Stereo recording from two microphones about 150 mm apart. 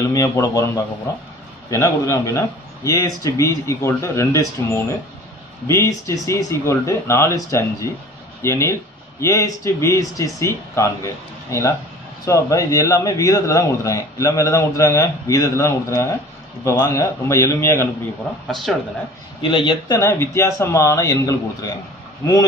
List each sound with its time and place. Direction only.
0.0 s a man's voice: 20° left (ahead or behind)
12.3 s a man's voice: 20° left (ahead or behind)
18.5 s speech: centre (ahead or behind)
19.5 s speech: 35° left (ahead or behind)
20.0 s a man's voice: 15° left (ahead or behind)